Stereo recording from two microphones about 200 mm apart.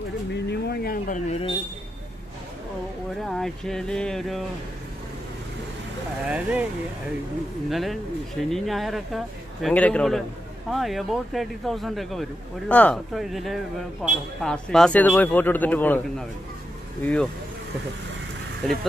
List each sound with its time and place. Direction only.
0.5 s speech: 50° left (ahead or behind); by 1.5 s 35° left (ahead or behind)
3.2 s speech: centre (ahead or behind)
6.2 s speech: 5° right (ahead or behind)
7.7 s speech: centre (ahead or behind)
18.6 s speech: 5° left (ahead or behind)